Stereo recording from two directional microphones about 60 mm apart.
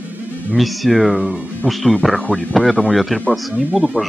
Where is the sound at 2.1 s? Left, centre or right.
Centre.